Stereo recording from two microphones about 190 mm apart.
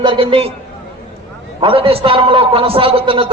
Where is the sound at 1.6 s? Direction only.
30° right (ahead or behind).